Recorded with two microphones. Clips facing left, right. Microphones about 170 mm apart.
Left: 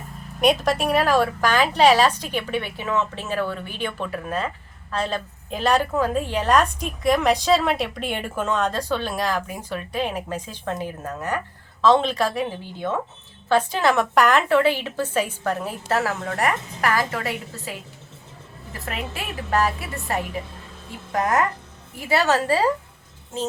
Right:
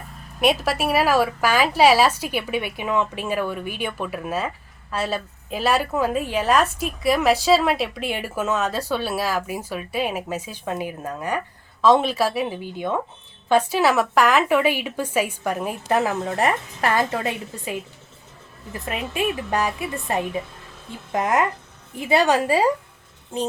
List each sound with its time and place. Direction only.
0.4 s a woman's voice: 5° right (ahead or behind)